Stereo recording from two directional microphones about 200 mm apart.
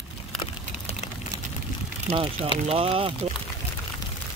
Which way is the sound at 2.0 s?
30° right (ahead or behind).